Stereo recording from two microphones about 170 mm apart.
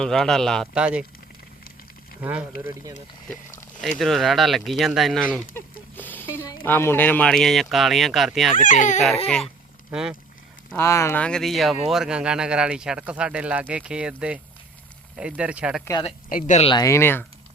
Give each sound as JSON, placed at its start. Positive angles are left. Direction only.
{"t": 0.0, "sound": "speech", "side_deg": 5}
{"t": 2.2, "sound": "speech", "side_deg": -10}
{"t": 3.8, "sound": "speech", "side_deg": 0}
{"t": 5.5, "sound": "a sound", "side_deg": 10}
{"t": 6.7, "sound": "speech", "side_deg": 10}
{"t": 8.5, "sound": "speech", "side_deg": 50}
{"t": 9.9, "sound": "speech", "side_deg": -5}
{"t": 10.8, "sound": "speech", "side_deg": 15}
{"t": 15.8, "sound": "speech", "side_deg": 20}
{"t": 16.3, "sound": "speech", "side_deg": 45}
{"t": 16.6, "sound": "speech", "side_deg": 20}